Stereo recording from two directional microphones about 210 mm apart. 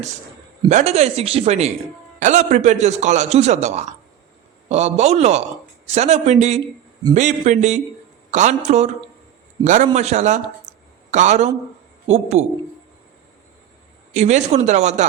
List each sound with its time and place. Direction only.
0.7 s a man's voice: 35° right (ahead or behind)
14.1 s a man's voice: 35° right (ahead or behind)